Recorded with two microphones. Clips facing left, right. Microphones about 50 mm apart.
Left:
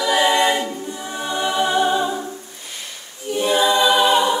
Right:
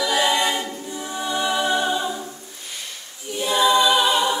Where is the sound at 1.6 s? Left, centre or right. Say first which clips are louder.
Left 7 dB; centre.